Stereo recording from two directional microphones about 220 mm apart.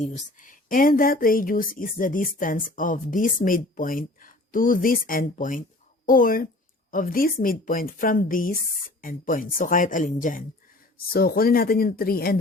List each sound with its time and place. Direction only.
0.0 s a woman's voice: 35° left (ahead or behind)